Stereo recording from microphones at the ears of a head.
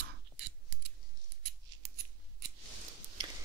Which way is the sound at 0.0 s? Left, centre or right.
Right.